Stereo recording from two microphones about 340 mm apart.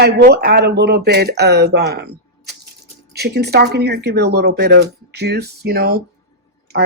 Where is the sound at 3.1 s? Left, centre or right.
Right.